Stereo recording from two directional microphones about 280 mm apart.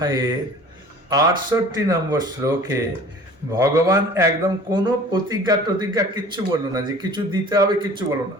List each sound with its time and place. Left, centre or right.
0.0 s a man's voice: centre